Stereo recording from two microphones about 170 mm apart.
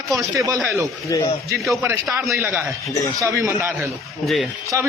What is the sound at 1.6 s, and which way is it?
Speech, centre (ahead or behind).